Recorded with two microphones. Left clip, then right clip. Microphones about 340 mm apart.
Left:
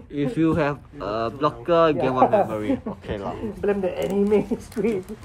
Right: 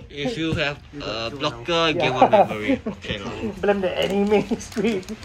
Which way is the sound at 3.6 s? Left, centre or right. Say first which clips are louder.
Right 3 dB; centre.